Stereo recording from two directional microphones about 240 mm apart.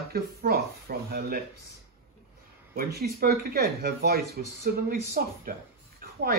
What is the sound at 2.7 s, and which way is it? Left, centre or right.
Speech, right.